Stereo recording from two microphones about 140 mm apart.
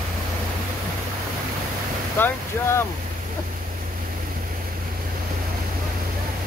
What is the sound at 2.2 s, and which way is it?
Speech, 20° left (ahead or behind).